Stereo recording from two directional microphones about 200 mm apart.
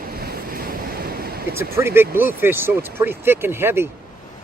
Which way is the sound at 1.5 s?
10° right (ahead or behind).